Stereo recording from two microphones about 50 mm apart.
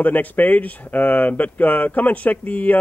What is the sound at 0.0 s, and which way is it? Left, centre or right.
Speech, left.